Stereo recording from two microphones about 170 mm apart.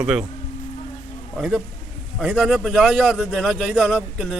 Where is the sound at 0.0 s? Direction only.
5° right (ahead or behind).